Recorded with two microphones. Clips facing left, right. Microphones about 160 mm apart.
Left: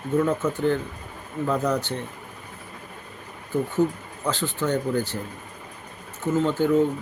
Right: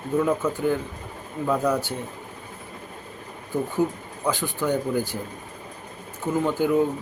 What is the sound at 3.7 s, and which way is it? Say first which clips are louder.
Speech: left 1 dB; 10° right (ahead or behind).